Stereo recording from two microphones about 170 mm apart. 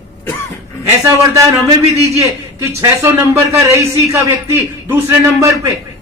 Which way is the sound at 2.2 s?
15° right (ahead or behind).